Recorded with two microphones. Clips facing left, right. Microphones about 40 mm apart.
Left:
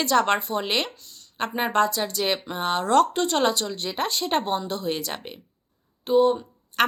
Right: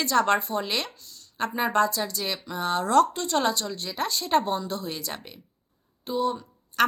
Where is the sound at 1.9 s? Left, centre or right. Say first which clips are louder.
Left 5 dB; left.